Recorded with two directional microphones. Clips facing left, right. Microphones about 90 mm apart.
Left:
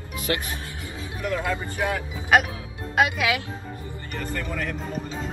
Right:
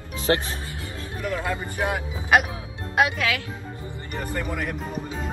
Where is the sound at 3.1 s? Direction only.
15° left (ahead or behind).